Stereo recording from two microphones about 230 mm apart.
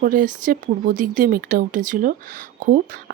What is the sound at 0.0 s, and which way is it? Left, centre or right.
Speech, right.